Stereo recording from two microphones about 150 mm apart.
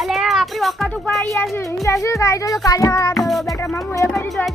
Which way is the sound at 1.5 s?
20° left (ahead or behind).